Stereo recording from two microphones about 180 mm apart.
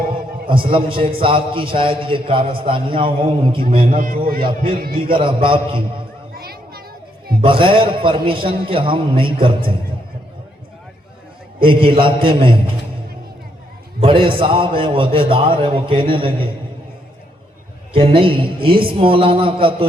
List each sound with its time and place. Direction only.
0.7 s a man's voice: 30° right (ahead or behind)
3.9 s a man's voice: 50° right (ahead or behind)
4.4 s a man's voice: 30° right (ahead or behind)
6.3 s children playing: 60° right (ahead or behind)
7.4 s a man's voice: 30° right (ahead or behind)
11.6 s a man's voice: 30° right (ahead or behind)
14.0 s a man's voice: 30° right (ahead or behind)
17.9 s a man's voice: 30° right (ahead or behind)